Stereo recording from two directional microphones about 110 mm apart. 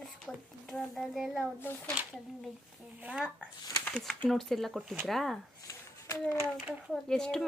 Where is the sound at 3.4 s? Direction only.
10° left (ahead or behind).